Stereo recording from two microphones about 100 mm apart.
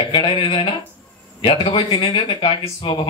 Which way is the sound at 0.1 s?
55° left (ahead or behind).